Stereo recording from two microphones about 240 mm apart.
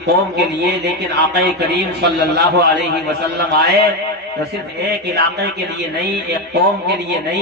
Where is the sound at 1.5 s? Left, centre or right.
Right.